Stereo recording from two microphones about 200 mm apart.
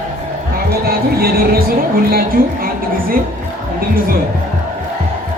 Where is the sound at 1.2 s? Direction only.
50° right (ahead or behind).